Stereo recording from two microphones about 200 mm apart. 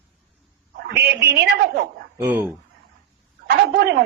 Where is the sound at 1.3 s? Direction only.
55° right (ahead or behind).